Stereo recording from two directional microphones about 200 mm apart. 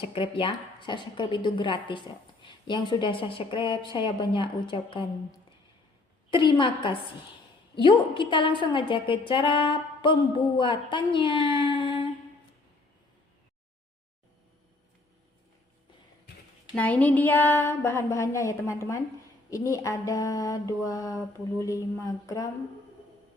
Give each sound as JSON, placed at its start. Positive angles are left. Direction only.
{"t": 0.0, "sound": "a woman's voice", "side_deg": 25}
{"t": 16.7, "sound": "mantra", "side_deg": 5}